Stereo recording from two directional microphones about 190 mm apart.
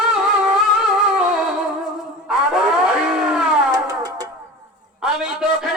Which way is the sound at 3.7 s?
20° right (ahead or behind).